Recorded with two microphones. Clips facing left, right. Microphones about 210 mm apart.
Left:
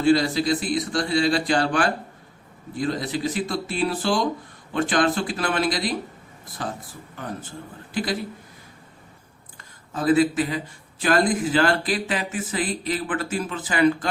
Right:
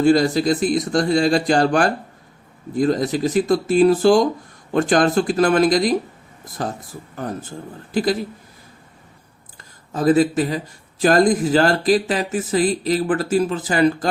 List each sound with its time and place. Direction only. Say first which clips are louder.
0.0 s a man's voice: right 4 dB; 45° right (ahead or behind)
9.9 s speech: right 3 dB; 40° right (ahead or behind)